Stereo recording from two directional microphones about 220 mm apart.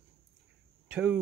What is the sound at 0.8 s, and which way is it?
Speech, 5° right (ahead or behind).